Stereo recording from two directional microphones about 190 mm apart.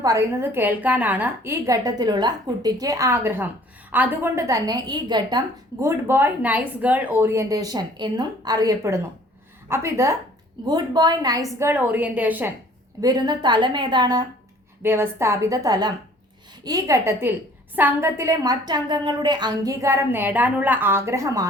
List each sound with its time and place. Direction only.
0.0 s a woman's voice: 15° right (ahead or behind)
5.8 s a woman's voice: 10° right (ahead or behind)
13.0 s a woman's voice: 20° right (ahead or behind)